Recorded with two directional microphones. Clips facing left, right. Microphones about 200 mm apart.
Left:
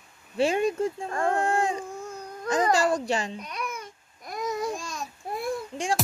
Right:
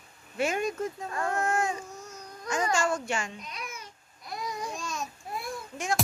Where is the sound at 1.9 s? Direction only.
55° left (ahead or behind).